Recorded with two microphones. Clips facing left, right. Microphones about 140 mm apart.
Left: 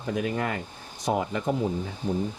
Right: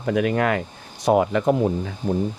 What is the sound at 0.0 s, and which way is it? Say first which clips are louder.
Speech: right 7 dB; 75° right (ahead or behind).